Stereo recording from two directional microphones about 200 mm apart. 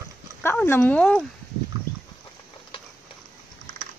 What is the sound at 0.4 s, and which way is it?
Speech, 10° left (ahead or behind).